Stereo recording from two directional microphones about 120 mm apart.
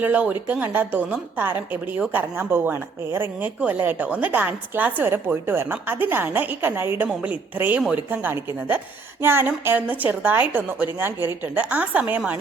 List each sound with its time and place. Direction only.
0.0 s a woman's voice: 10° right (ahead or behind)
8.2 s a woman's voice: 15° right (ahead or behind)